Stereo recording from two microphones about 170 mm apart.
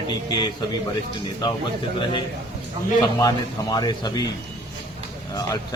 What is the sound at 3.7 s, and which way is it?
Speech, 25° left (ahead or behind).